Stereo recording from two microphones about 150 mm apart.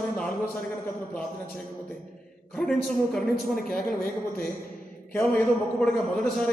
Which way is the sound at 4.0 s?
65° left (ahead or behind).